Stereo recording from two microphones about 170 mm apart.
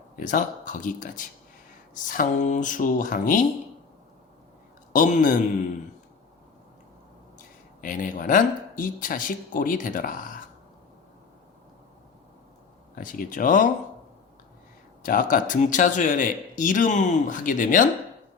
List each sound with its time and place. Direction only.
0.2 s speech: 50° left (ahead or behind)
4.9 s speech: 50° left (ahead or behind)
7.8 s speech: 50° left (ahead or behind)
13.0 s speech: 50° left (ahead or behind)
15.0 s speech: 55° left (ahead or behind)